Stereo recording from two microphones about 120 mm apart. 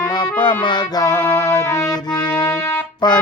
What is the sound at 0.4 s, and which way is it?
Music, 40° left (ahead or behind).